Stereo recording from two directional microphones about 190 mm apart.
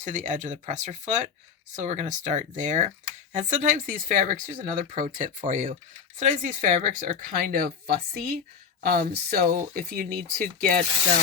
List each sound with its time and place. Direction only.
0.0 s speech: 40° right (ahead or behind)